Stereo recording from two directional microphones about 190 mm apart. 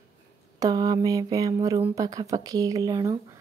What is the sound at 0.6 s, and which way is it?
Mantra, 20° right (ahead or behind).